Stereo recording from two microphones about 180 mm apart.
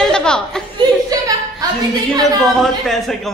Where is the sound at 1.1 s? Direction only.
20° right (ahead or behind).